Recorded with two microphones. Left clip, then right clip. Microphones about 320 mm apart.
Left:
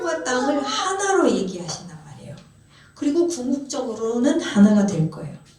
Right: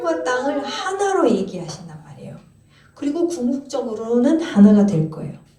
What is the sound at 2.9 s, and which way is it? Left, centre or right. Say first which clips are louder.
A woman's voice: left 1 dB; centre.